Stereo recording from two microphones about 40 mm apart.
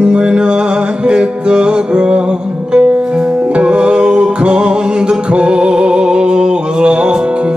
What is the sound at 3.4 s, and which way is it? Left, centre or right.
Music, right.